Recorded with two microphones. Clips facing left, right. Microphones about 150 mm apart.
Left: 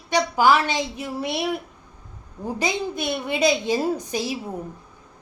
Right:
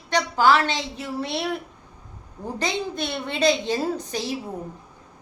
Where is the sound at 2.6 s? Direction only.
10° left (ahead or behind).